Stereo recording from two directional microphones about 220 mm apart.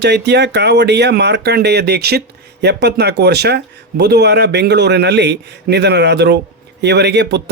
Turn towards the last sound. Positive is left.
turn(degrees=-50)  # may be behind; listen again after turning